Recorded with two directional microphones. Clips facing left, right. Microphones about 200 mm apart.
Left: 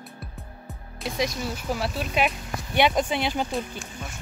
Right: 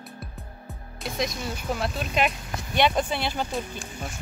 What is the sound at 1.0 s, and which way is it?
Speech, 5° left (ahead or behind).